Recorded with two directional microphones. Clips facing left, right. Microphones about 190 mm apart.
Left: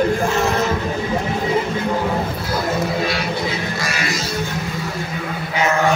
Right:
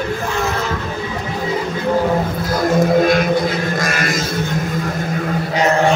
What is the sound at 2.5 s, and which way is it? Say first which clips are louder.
Music: right 8 dB; 45° right (ahead or behind).